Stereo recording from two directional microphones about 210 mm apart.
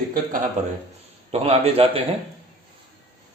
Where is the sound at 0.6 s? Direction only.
35° right (ahead or behind).